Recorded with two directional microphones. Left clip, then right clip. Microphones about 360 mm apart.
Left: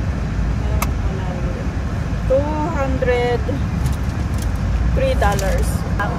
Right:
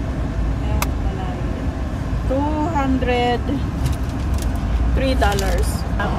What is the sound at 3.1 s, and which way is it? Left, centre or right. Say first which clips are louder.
Speech: left 2 dB; centre.